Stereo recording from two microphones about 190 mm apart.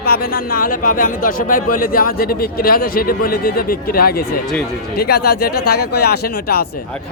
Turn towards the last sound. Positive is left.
turn(degrees=55)  # may be behind; listen again after turning